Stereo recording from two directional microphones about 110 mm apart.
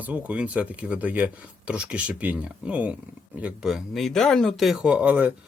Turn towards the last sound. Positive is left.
turn(degrees=-10)  # may be behind; listen again after turning